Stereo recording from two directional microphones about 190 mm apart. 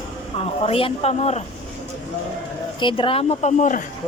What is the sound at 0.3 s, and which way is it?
A woman's voice, 30° left (ahead or behind).